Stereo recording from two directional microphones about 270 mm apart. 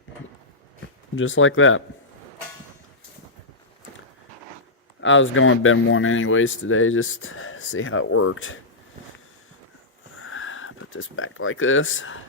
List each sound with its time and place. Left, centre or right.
1.1 s speech: left
4.9 s speech: left
10.2 s a sound: left